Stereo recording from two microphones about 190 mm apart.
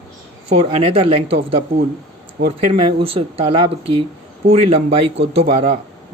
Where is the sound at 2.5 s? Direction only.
30° right (ahead or behind).